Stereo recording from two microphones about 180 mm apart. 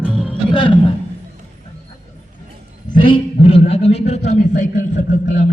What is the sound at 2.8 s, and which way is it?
A man's voice, 25° left (ahead or behind).